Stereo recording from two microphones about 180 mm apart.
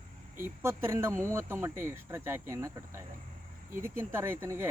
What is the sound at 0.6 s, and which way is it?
Speech, 15° right (ahead or behind).